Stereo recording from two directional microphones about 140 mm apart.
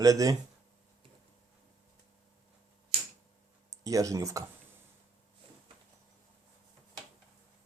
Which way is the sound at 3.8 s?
25° right (ahead or behind).